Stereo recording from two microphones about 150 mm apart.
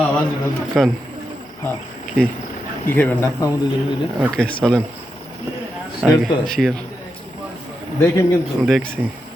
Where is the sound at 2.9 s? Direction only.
15° left (ahead or behind).